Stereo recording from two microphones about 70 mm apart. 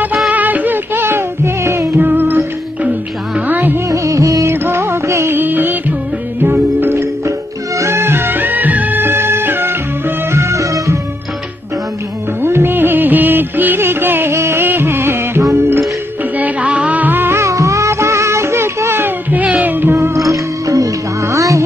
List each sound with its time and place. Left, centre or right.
0.3 s music: right
2.0 s music: right
3.9 s music of bollywood: right
4.6 s music of bollywood: right
5.3 s music: right
6.8 s music: right
12.4 s music: right
16.3 s music: right
17.4 s music: right
19.3 s music: right
20.2 s music: right